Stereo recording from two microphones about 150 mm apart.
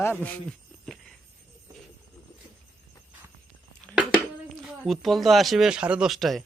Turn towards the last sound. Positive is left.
turn(degrees=0)  # may be behind; listen again after turning